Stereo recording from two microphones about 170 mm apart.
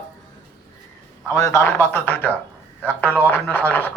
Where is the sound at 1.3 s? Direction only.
15° left (ahead or behind).